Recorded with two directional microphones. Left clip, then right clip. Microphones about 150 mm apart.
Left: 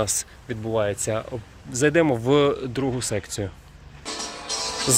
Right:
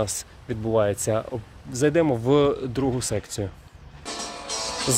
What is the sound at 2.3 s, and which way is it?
Speech, 15° right (ahead or behind).